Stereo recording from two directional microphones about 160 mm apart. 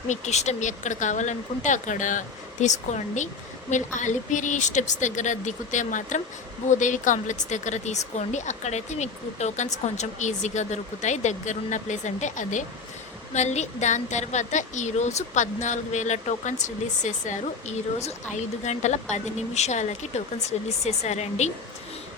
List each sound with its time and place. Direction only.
0.1 s a woman's voice: 45° left (ahead or behind)